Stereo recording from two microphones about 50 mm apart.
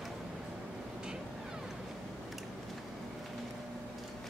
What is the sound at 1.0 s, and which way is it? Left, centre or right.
Vehicle, centre.